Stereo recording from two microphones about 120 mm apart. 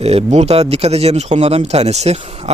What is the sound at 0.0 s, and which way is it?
Speech, 60° right (ahead or behind).